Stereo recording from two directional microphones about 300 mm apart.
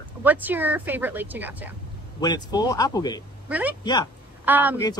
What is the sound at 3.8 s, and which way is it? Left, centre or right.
Speech, centre.